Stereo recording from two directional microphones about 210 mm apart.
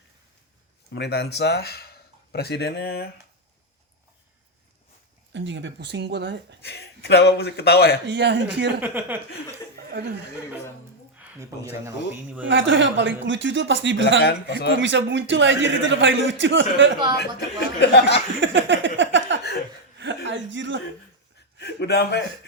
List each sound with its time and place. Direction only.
0.9 s speech: 55° left (ahead or behind)
5.3 s a man's voice: 60° right (ahead or behind)
6.6 s a man's voice: 50° left (ahead or behind)
8.0 s a man's voice: 55° right (ahead or behind)
8.8 s speech: 10° right (ahead or behind)
9.7 s speech: 50° right (ahead or behind)
11.9 s speech: 10° right (ahead or behind)
12.5 s a man's voice: 60° right (ahead or behind)
14.2 s a man's voice: 50° left (ahead or behind)
14.8 s a man's voice: 60° right (ahead or behind)
17.7 s a man's voice: 55° left (ahead or behind)
18.3 s a sound: 60° right (ahead or behind)
20.0 s speech: 60° right (ahead or behind)
21.6 s a man's voice: 55° left (ahead or behind)